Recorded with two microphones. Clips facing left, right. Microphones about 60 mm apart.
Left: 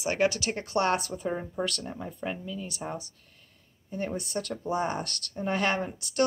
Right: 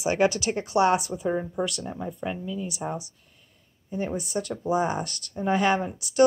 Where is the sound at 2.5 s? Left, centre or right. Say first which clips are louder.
Right 5 dB; centre.